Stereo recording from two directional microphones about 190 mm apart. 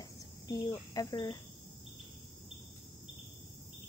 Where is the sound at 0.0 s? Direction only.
20° left (ahead or behind).